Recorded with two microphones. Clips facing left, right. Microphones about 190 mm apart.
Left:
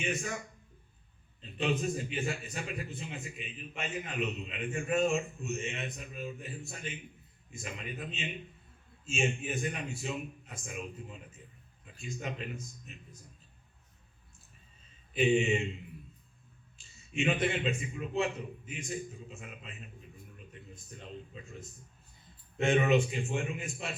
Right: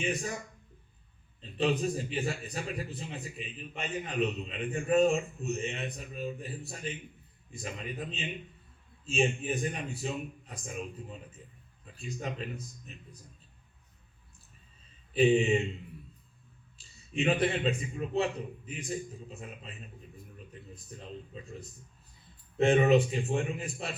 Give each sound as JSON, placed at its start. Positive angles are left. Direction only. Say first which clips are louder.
{"t": 0.0, "sound": "a man's voice", "louder": "right 2 dB", "side_deg": -35}
{"t": 1.4, "sound": "a man's voice", "louder": "right 3 dB", "side_deg": -35}
{"t": 15.1, "sound": "a man's voice", "louder": "right 3 dB", "side_deg": -35}
{"t": 16.7, "sound": "a man's voice", "louder": "right 2 dB", "side_deg": -35}